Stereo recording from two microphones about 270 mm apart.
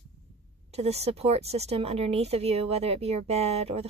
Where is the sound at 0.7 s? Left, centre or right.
Right.